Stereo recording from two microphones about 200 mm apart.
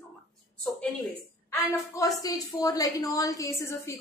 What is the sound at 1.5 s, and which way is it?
A woman's voice, 15° left (ahead or behind).